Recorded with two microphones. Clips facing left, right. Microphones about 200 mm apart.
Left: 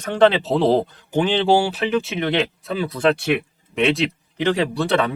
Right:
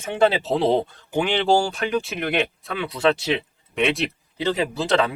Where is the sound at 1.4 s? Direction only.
5° left (ahead or behind).